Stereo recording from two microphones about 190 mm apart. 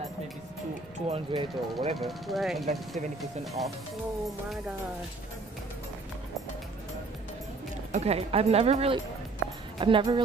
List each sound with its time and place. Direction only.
1.0 s speech: 30° right (ahead or behind)
2.0 s speech: centre (ahead or behind)
7.9 s speech: 35° right (ahead or behind)